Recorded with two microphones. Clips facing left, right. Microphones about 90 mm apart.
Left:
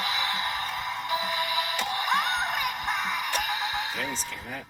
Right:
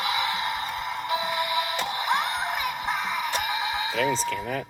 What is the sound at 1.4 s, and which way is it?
Music, 15° right (ahead or behind).